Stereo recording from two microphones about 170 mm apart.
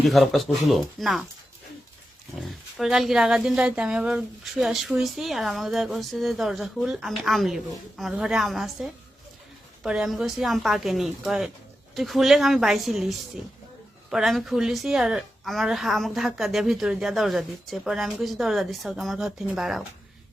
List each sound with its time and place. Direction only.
0.1 s speech: centre (ahead or behind)
2.4 s speech: centre (ahead or behind)